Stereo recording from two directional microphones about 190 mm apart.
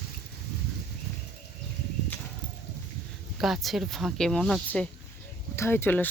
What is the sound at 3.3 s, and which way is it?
Speech, centre (ahead or behind).